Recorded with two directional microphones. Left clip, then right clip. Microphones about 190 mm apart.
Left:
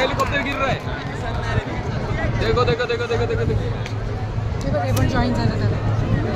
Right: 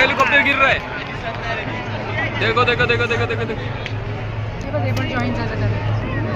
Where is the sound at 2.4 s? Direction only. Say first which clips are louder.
Right 3 dB; 5° left (ahead or behind).